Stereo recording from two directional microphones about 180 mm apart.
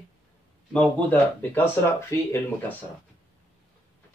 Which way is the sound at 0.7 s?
5° left (ahead or behind).